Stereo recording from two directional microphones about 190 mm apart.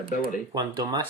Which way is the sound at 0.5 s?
25° right (ahead or behind).